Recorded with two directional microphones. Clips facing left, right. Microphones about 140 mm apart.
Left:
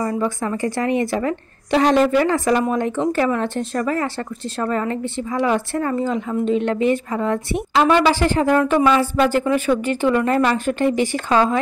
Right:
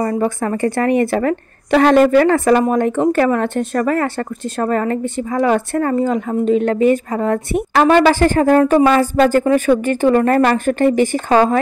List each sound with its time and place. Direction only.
0.0 s a woman's voice: 50° right (ahead or behind)